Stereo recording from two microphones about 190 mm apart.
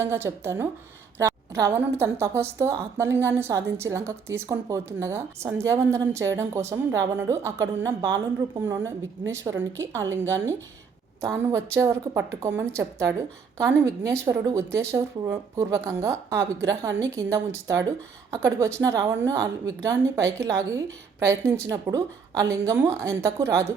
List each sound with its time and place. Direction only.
0.0 s a woman's voice: 15° right (ahead or behind)